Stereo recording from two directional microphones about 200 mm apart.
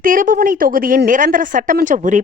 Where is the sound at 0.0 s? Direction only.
40° right (ahead or behind).